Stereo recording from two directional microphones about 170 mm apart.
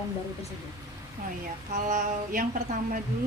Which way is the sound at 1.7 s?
45° right (ahead or behind).